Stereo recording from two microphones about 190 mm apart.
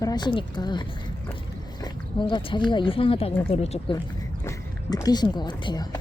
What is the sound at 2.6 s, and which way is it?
Speech, 25° left (ahead or behind).